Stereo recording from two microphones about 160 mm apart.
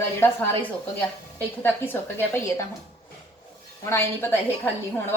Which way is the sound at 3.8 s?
15° left (ahead or behind).